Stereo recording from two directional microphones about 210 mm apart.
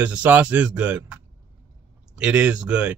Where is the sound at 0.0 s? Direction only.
5° right (ahead or behind).